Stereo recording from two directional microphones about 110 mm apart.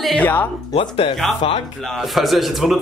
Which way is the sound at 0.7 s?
60° left (ahead or behind).